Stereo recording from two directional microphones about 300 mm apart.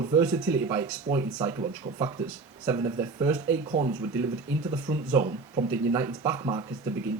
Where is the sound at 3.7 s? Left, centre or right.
Right.